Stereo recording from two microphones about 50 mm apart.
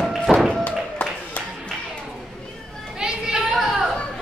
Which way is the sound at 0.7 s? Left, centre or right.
Left.